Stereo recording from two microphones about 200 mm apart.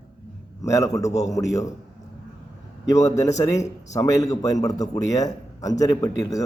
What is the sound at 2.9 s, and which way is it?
A man's voice, 15° left (ahead or behind).